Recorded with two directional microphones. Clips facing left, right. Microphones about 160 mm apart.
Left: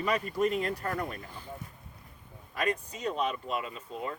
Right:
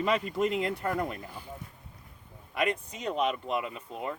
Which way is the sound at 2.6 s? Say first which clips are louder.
Right 1 dB; 20° right (ahead or behind).